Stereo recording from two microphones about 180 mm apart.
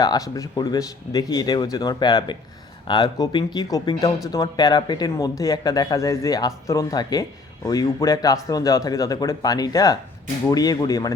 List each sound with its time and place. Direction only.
0.0 s speech: 20° left (ahead or behind)